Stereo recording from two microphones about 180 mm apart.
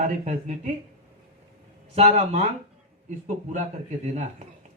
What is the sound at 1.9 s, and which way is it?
Speech, 35° right (ahead or behind).